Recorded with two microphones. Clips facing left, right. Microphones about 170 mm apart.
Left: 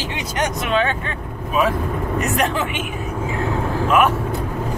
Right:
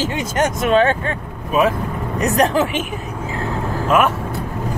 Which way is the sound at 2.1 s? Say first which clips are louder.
Right 6 dB; 35° right (ahead or behind).